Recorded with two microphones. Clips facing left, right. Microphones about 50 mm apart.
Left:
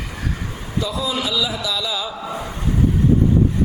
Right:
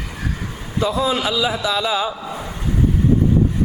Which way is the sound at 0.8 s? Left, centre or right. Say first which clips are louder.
Right 4 dB; right.